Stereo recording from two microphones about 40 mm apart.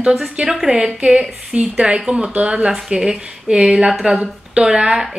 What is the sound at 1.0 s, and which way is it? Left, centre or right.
Speech, right.